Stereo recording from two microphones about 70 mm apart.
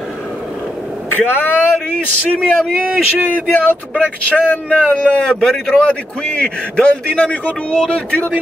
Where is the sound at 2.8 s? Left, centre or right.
Right.